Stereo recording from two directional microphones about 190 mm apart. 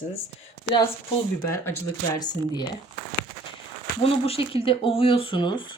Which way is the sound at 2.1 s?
20° left (ahead or behind).